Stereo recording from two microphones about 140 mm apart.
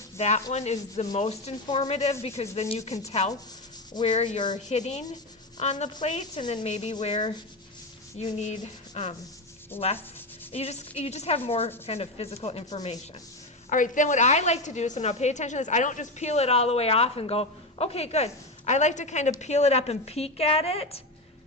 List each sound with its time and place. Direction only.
0.2 s a woman's voice: 50° left (ahead or behind)
7.0 s sanding: 40° left (ahead or behind)
8.2 s a woman's voice: 50° left (ahead or behind)
9.7 s sanding: 15° left (ahead or behind)
10.5 s a woman's voice: 50° left (ahead or behind)
13.7 s a woman's voice: 65° left (ahead or behind); by 21.0 s 45° left (ahead or behind)